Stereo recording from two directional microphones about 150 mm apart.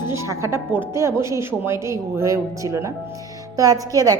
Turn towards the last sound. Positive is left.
turn(degrees=-25)  # may be behind; listen again after turning